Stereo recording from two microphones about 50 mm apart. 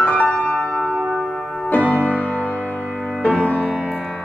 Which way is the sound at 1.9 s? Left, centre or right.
Left.